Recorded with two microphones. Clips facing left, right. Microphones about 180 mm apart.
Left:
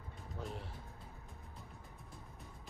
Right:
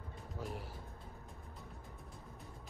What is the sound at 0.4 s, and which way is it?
Speech, centre (ahead or behind).